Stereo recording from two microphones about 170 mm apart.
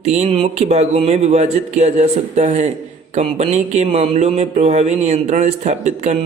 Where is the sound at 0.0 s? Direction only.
40° right (ahead or behind).